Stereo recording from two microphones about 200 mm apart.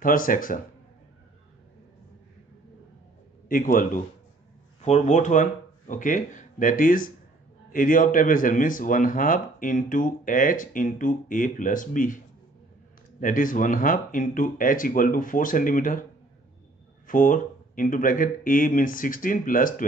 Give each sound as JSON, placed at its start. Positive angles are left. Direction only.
{"t": 0.0, "sound": "speech", "side_deg": 45}
{"t": 3.4, "sound": "speech", "side_deg": 45}
{"t": 13.2, "sound": "speech", "side_deg": 40}
{"t": 17.1, "sound": "speech", "side_deg": 40}